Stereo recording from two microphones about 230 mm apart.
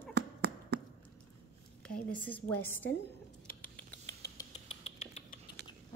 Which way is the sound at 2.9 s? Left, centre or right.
Left.